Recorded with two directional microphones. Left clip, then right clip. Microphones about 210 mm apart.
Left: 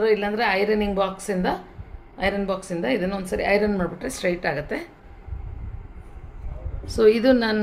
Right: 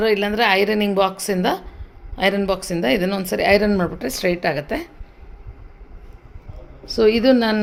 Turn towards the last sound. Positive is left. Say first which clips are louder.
# right 2 dB
turn(degrees=-25)  # may be behind; listen again after turning